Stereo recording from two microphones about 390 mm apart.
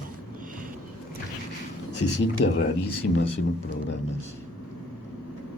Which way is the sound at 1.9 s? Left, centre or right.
Left.